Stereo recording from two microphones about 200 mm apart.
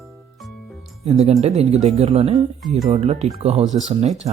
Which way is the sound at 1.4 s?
35° right (ahead or behind).